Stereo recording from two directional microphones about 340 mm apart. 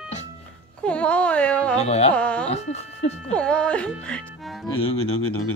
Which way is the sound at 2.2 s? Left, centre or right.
Centre.